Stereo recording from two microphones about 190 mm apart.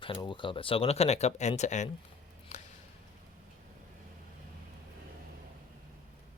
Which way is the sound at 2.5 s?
40° left (ahead or behind).